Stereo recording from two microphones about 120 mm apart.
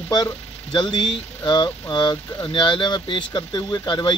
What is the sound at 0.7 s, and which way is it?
Speech, 40° left (ahead or behind).